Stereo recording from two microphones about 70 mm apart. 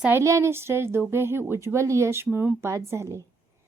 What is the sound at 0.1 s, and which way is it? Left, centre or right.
A woman's voice, right.